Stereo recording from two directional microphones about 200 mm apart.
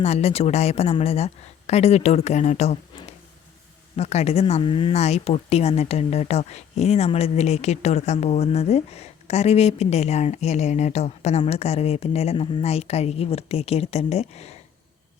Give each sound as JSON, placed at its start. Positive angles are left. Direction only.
{"t": 0.0, "sound": "speech", "side_deg": 30}